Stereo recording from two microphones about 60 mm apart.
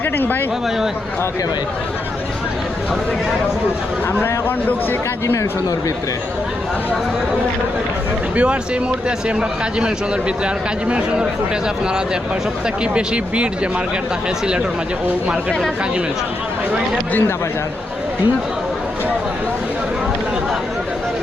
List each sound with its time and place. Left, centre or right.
0.0 s speech: left
4.2 s speech: left
8.4 s speech: centre
12.8 s speech: centre
17.1 s speech: left